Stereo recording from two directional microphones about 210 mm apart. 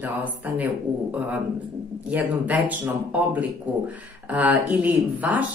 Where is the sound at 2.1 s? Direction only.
10° right (ahead or behind).